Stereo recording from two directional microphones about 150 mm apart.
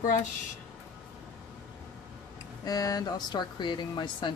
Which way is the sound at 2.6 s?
25° left (ahead or behind).